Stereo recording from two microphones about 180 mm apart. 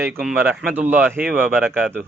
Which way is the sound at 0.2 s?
5° right (ahead or behind).